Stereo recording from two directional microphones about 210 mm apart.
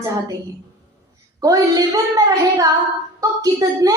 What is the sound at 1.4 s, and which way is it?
A woman's voice, 15° right (ahead or behind).